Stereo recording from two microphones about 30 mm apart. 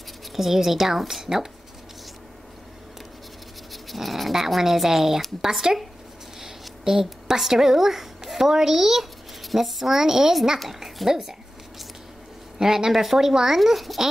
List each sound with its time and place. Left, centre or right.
0.3 s speech: centre
3.7 s dog: centre
4.6 s speech: centre
6.8 s a woman's voice: centre
12.5 s speech: right
12.9 s speech: centre
13.6 s a child's voice: centre